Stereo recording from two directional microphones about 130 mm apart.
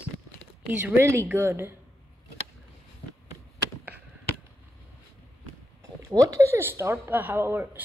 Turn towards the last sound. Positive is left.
turn(degrees=-15)  # may be behind; listen again after turning